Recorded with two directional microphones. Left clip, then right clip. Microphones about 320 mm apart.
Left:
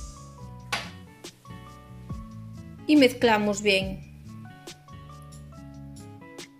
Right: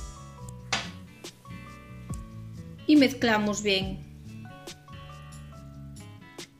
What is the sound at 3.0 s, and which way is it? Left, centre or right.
Speech, centre.